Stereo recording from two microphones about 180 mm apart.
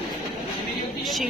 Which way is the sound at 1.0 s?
Centre (ahead or behind).